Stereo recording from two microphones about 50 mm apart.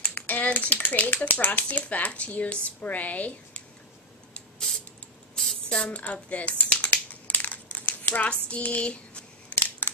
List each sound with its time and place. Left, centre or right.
0.0 s speech: left
5.3 s a sound: centre
5.9 s a woman's voice: left
6.2 s crumpling: left